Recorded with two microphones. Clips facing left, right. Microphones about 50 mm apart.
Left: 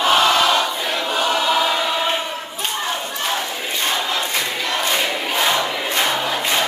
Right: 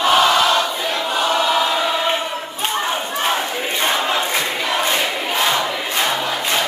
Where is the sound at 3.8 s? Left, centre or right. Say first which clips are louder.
Right 3 dB; centre.